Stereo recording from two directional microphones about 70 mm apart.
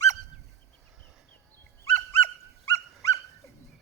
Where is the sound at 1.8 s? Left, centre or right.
Left.